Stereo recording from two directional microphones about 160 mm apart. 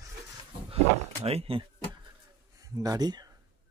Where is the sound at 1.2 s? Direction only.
40° right (ahead or behind).